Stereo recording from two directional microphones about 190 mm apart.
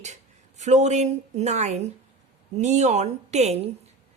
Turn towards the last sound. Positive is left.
turn(degrees=-35)  # may be behind; listen again after turning